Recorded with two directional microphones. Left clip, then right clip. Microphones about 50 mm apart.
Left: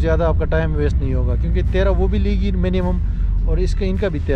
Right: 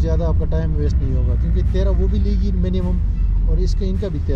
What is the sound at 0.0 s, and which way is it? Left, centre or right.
Speech, left.